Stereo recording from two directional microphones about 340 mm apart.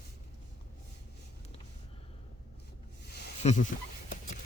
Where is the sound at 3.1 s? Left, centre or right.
Left.